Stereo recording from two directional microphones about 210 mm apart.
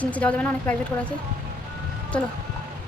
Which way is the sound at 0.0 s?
5° left (ahead or behind).